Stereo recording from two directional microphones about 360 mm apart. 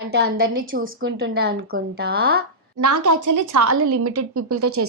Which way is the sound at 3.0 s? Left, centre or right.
Right.